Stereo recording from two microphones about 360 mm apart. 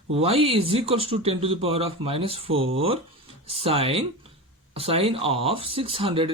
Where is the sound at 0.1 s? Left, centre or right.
Centre.